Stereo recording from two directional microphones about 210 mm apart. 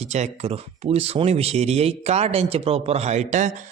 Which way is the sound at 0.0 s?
30° right (ahead or behind).